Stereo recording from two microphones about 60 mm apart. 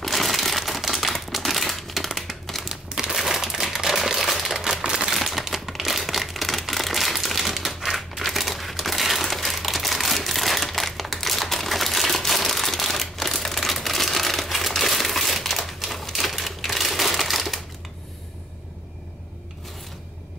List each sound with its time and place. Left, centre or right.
0.0 s crumpling: centre